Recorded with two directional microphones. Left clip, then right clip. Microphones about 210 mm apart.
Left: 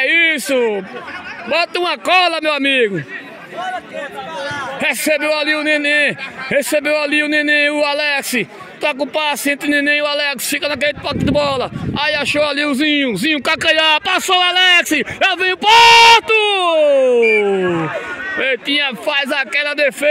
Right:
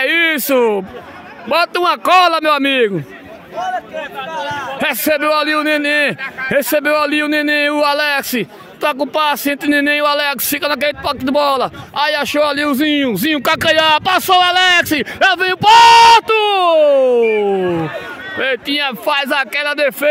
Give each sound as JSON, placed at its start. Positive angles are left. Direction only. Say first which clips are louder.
{"t": 0.0, "sound": "a man's voice", "louder": "even", "side_deg": -20}
{"t": 3.5, "sound": "a sound", "louder": "right 3 dB", "side_deg": -35}
{"t": 4.7, "sound": "a man's voice", "louder": "even", "side_deg": -15}